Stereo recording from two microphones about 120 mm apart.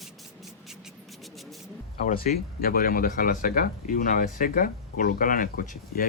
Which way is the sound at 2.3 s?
90° left.